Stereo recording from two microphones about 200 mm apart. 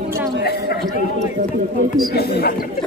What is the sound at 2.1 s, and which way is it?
Speech, 50° left (ahead or behind).